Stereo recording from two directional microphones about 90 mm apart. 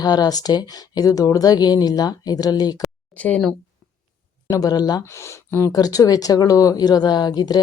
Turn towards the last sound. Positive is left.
turn(degrees=50)  # may be behind; listen again after turning